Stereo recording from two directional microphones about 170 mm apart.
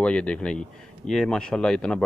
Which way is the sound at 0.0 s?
5° left (ahead or behind).